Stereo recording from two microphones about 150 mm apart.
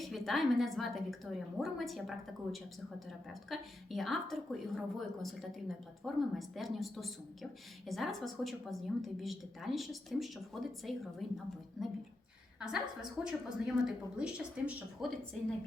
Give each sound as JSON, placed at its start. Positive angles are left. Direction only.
{"t": 0.0, "sound": "a woman's voice", "side_deg": 0}